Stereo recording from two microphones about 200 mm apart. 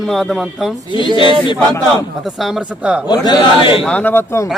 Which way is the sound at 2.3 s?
Centre (ahead or behind).